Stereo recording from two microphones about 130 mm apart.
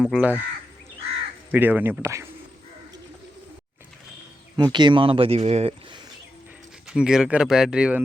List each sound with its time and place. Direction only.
0.0 s speech: 10° right (ahead or behind)
1.5 s speech: 15° right (ahead or behind)
4.5 s speech: 35° right (ahead or behind); by 5.7 s 55° right (ahead or behind)
6.8 s speech: 5° right (ahead or behind)